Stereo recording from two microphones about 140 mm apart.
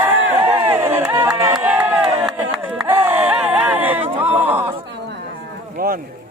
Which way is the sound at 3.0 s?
10° right (ahead or behind).